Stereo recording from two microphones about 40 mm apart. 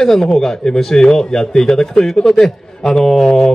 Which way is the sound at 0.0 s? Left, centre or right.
Centre.